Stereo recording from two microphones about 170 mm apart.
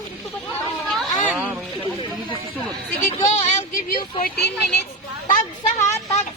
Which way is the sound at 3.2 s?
45° left (ahead or behind).